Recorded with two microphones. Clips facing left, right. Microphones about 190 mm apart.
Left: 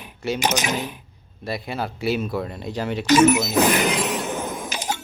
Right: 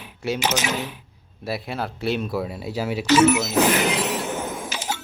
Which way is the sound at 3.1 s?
15° left (ahead or behind).